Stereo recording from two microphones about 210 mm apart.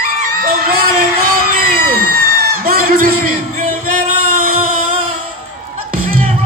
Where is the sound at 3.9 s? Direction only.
40° right (ahead or behind).